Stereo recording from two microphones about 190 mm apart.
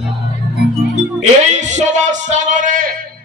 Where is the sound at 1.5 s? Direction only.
40° right (ahead or behind).